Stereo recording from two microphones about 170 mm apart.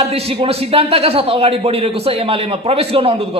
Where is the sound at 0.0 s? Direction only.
35° right (ahead or behind).